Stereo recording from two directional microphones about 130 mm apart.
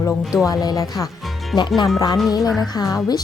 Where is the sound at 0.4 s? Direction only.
30° left (ahead or behind).